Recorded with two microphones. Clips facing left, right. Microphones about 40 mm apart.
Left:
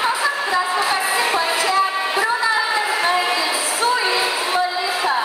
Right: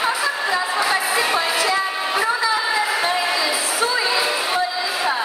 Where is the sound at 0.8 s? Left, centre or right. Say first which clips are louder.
Even; left.